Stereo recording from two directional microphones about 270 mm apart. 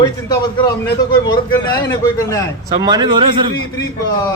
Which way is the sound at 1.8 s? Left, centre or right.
Centre.